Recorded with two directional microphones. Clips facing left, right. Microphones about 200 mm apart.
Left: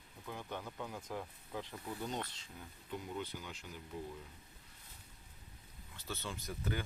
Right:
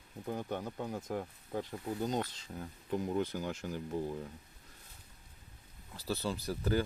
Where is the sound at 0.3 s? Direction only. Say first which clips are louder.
Right 7 dB; 45° right (ahead or behind).